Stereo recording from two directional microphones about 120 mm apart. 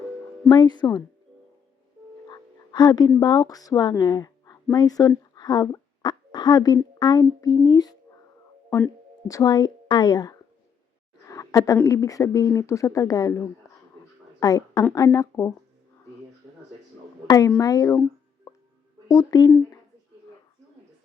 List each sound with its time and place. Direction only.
0.5 s a woman's voice: 35° left (ahead or behind)
2.3 s a sound: 35° left (ahead or behind)
3.2 s speech: 35° left (ahead or behind)
6.0 s a sound: 35° left (ahead or behind)
7.0 s a woman's voice: 35° left (ahead or behind)
9.2 s a woman's voice: 30° left (ahead or behind)
17.2 s speech: 30° left (ahead or behind)
19.1 s a woman's voice: 35° left (ahead or behind)